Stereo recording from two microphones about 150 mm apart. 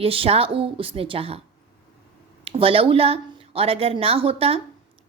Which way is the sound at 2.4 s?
40° right (ahead or behind).